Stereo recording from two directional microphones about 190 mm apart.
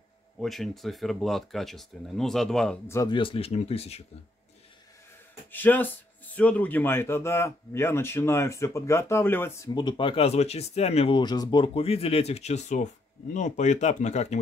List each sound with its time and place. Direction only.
0.4 s speech: centre (ahead or behind)
2.9 s speech: 20° left (ahead or behind)
5.5 s speech: 10° left (ahead or behind)
9.8 s speech: 25° left (ahead or behind)